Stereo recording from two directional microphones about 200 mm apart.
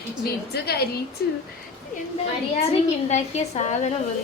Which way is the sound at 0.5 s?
50° left (ahead or behind).